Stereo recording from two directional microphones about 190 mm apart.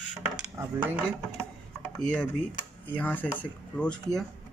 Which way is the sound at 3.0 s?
10° left (ahead or behind).